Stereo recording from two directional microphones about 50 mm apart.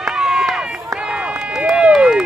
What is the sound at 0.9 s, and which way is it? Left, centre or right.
Run, centre.